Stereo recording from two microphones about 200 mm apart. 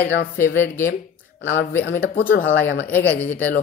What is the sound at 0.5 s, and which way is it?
Speech, 10° left (ahead or behind).